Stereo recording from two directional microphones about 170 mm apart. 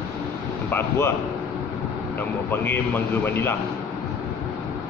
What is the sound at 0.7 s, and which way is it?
Speech, 15° left (ahead or behind).